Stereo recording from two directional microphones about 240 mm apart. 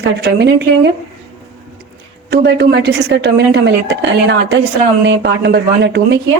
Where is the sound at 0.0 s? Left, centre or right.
Right.